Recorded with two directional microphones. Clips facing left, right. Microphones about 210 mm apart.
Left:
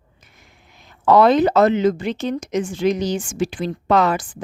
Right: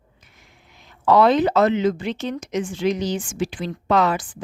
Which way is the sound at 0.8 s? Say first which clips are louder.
Left 2 dB; 45° left (ahead or behind).